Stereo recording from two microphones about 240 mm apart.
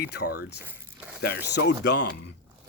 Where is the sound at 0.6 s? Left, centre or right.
Centre.